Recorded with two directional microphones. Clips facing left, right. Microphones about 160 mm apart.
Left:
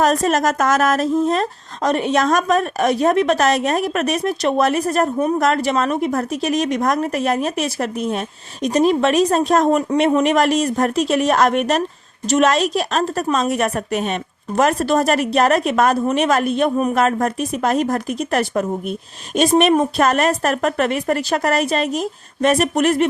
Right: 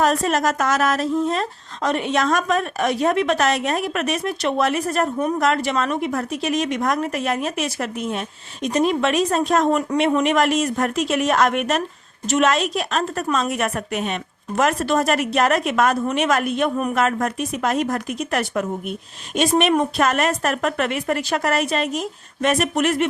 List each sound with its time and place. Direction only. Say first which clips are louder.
0.0 s a woman's voice: left 3 dB; 45° left (ahead or behind)